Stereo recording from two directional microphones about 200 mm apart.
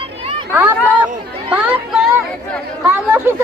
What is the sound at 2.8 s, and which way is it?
Speech, 10° right (ahead or behind).